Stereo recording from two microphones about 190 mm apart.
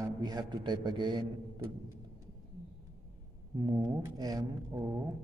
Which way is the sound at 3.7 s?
20° right (ahead or behind).